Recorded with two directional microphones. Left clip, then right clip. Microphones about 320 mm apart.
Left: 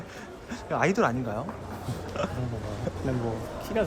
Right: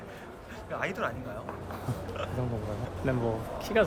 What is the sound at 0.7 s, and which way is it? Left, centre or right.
Speech, centre.